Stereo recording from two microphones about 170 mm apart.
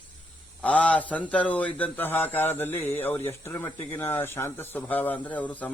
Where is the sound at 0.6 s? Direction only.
10° left (ahead or behind).